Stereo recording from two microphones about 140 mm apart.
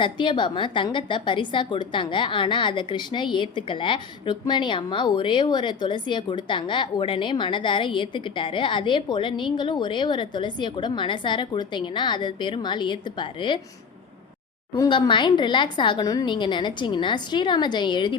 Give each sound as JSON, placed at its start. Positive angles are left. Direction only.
{"t": 0.0, "sound": "a woman's voice", "side_deg": 35}
{"t": 14.8, "sound": "a woman's voice", "side_deg": 35}